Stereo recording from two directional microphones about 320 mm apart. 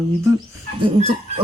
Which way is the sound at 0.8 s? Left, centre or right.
Centre.